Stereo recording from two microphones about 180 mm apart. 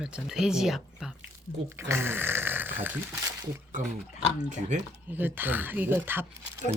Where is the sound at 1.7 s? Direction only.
15° right (ahead or behind).